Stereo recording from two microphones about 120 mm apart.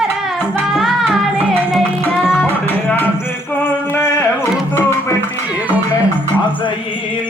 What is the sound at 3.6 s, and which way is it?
Music, 20° left (ahead or behind).